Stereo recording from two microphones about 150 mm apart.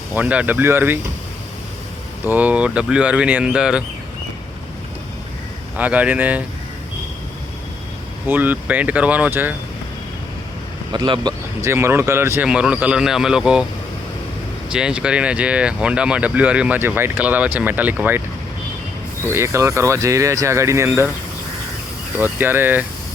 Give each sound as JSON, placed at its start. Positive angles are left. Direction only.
{"t": 0.1, "sound": "speech", "side_deg": -10}
{"t": 2.2, "sound": "speech", "side_deg": -10}
{"t": 5.7, "sound": "speech", "side_deg": -10}
{"t": 8.3, "sound": "speech", "side_deg": -10}
{"t": 10.9, "sound": "speech", "side_deg": -30}
{"t": 11.7, "sound": "speech", "side_deg": -15}
{"t": 14.7, "sound": "speech", "side_deg": -5}
{"t": 19.3, "sound": "speech", "side_deg": -20}
{"t": 22.2, "sound": "speech", "side_deg": -15}